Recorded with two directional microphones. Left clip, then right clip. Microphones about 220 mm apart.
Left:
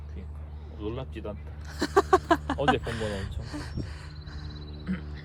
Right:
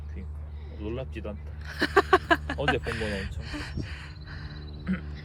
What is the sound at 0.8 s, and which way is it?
Speech, 30° left (ahead or behind).